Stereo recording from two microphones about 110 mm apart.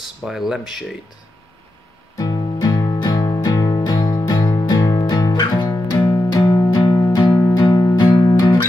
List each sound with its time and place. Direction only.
0.0 s speech: 5° right (ahead or behind)
2.1 s music: 35° left (ahead or behind)